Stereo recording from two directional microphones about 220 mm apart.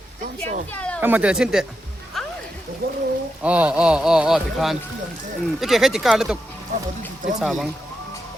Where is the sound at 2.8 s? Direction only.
45° right (ahead or behind).